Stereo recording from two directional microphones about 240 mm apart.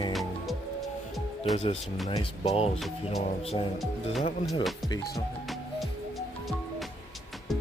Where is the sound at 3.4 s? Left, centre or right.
Left.